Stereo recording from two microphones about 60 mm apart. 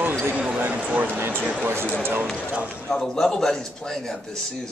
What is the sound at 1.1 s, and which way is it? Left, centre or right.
Speech, right.